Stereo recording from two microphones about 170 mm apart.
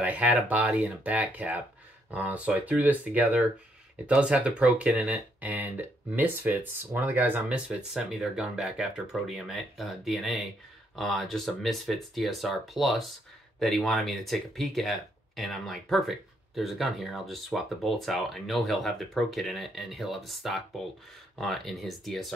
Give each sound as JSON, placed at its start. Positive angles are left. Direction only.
{"t": 0.0, "sound": "speech", "side_deg": -10}